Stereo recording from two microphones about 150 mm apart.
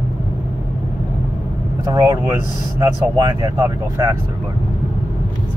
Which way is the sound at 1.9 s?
20° right (ahead or behind).